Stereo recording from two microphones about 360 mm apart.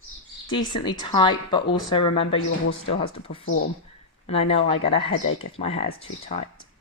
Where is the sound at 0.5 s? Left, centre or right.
Centre.